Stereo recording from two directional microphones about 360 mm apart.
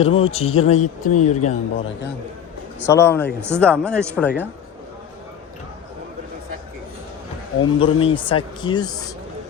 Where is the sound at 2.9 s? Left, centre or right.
Centre.